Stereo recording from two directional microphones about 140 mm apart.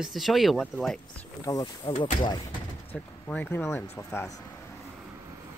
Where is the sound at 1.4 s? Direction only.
25° left (ahead or behind).